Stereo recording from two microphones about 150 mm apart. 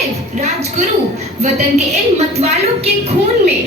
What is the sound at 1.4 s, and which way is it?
A woman's voice, 50° right (ahead or behind).